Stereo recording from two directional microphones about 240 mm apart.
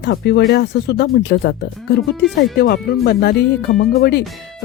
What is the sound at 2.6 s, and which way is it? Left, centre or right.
Speech, left.